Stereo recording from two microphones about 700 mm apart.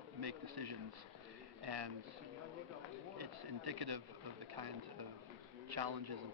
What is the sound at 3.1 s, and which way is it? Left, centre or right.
Speech, right.